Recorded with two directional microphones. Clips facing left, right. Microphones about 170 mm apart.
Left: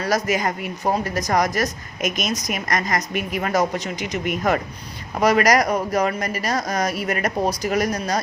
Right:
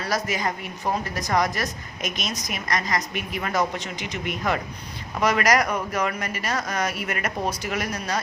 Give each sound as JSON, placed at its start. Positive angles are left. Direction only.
{"t": 0.0, "sound": "a woman's voice", "side_deg": 45}